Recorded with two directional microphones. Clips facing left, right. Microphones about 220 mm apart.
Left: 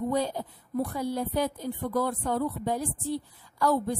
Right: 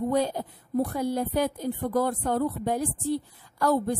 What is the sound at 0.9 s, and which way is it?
A woman's voice, 50° right (ahead or behind).